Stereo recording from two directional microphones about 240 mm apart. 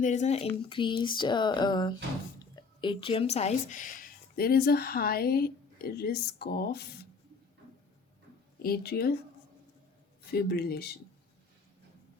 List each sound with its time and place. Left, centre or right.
0.0 s speech: left
8.5 s speech: left
10.3 s speech: left